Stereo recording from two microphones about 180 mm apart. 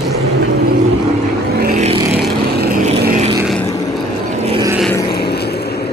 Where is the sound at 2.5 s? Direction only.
60° right (ahead or behind).